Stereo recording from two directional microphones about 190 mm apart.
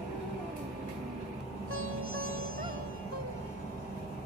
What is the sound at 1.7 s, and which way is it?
Music, 90° right.